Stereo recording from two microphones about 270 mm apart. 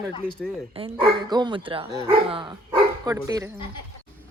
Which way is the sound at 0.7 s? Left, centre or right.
Centre.